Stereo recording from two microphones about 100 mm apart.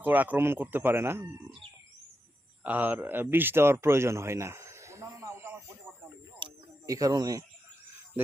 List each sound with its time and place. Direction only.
0.0 s speech: 15° right (ahead or behind)
2.6 s speech: 20° right (ahead or behind)
6.4 s a sound: 50° right (ahead or behind)
6.8 s speech: 35° right (ahead or behind)